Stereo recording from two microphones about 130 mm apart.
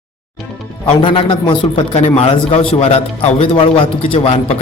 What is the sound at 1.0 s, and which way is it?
A man's voice, 40° left (ahead or behind).